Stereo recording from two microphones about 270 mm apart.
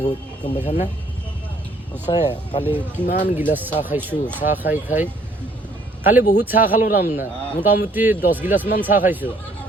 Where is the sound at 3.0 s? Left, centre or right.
Left.